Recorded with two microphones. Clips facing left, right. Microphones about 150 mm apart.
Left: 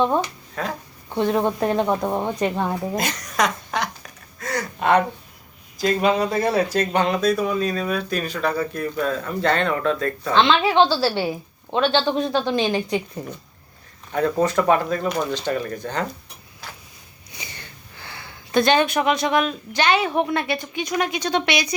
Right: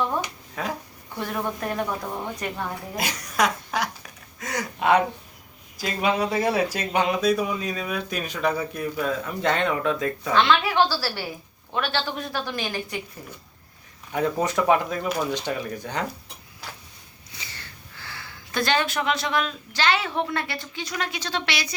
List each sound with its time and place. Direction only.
0.2 s finger snapping: 10° right (ahead or behind)
1.1 s a woman's voice: 25° left (ahead or behind)
2.9 s speech: 5° right (ahead or behind)
10.3 s a woman's voice: 25° left (ahead or behind)
14.1 s speech: 15° right (ahead or behind)
17.3 s speech: 15° left (ahead or behind)